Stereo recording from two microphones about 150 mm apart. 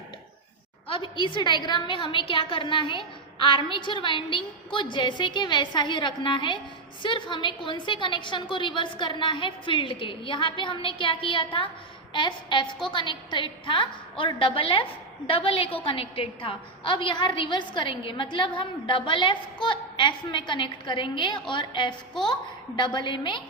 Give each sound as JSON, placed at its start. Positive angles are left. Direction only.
{"t": 0.9, "sound": "a woman's voice", "side_deg": 35}